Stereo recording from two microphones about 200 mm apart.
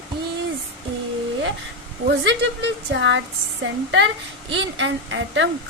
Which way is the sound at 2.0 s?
60° right (ahead or behind).